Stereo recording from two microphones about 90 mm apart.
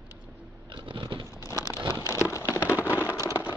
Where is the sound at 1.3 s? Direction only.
40° left (ahead or behind).